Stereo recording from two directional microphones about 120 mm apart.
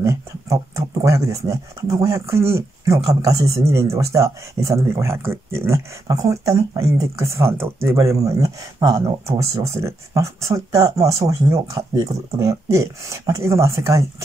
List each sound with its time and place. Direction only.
0.0 s speech: 25° right (ahead or behind)